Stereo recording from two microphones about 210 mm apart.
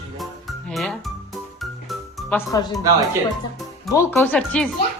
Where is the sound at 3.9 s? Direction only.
15° left (ahead or behind).